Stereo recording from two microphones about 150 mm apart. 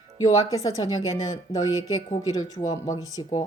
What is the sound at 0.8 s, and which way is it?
A woman's voice, 25° left (ahead or behind).